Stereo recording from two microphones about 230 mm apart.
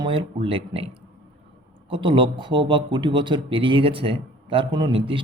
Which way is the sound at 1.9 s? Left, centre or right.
Right.